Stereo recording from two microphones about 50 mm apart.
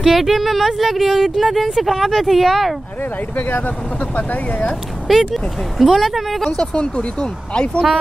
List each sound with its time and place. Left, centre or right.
0.0 s speech: centre
3.4 s speech: left
5.3 s speech: centre
6.5 s speech: centre